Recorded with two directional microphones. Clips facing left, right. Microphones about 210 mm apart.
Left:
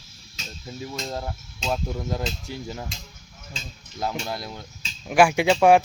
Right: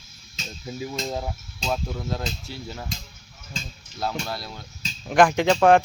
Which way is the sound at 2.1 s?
15° left (ahead or behind).